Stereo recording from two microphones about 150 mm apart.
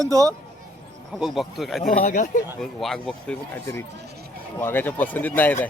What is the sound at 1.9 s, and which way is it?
Speech, 60° left (ahead or behind).